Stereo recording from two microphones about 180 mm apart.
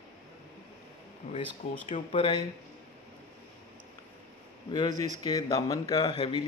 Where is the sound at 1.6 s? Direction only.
40° left (ahead or behind).